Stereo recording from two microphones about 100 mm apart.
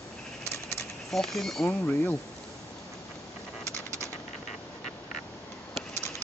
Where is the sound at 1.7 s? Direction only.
15° left (ahead or behind).